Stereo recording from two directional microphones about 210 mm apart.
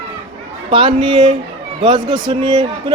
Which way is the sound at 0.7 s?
25° right (ahead or behind).